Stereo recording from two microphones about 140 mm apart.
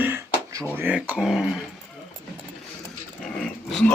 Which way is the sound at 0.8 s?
10° right (ahead or behind).